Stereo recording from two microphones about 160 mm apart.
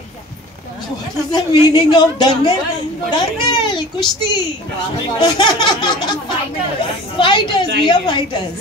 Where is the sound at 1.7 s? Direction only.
25° left (ahead or behind).